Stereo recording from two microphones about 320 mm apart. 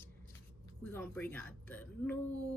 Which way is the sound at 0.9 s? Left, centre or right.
Centre.